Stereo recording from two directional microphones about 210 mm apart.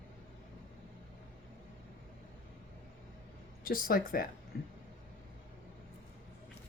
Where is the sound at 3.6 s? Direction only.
45° left (ahead or behind).